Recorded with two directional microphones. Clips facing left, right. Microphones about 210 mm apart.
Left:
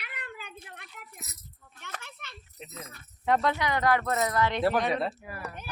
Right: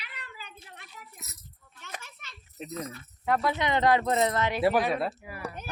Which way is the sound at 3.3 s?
5° right (ahead or behind).